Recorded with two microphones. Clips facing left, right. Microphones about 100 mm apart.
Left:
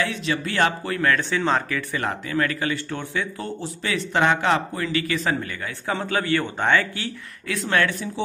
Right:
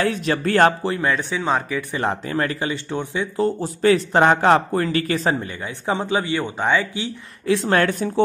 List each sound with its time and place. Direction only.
0.0 s speech: 45° right (ahead or behind)
0.8 s speech: 20° right (ahead or behind)
2.0 s a man's voice: 30° right (ahead or behind)
3.4 s speech: 40° right (ahead or behind)
5.3 s a man's voice: 20° right (ahead or behind)
7.4 s a man's voice: 30° right (ahead or behind)
7.8 s speech: 45° right (ahead or behind)